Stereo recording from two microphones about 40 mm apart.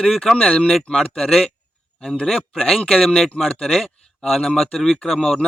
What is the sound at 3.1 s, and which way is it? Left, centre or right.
Speech, centre.